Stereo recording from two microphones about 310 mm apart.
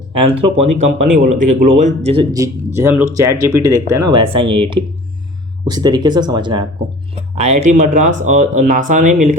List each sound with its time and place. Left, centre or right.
0.1 s speech: centre
0.6 s speech: right
1.2 s speech: right